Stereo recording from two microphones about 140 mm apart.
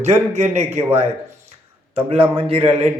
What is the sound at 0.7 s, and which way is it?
Speech, 15° right (ahead or behind).